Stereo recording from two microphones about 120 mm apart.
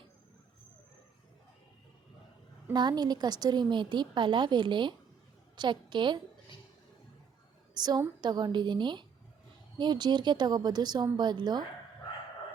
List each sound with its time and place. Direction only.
2.7 s a woman's voice: 35° right (ahead or behind)
7.7 s a woman's voice: 35° right (ahead or behind)